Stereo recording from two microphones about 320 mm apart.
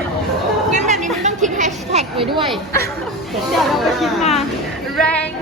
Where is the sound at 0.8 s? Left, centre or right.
Right.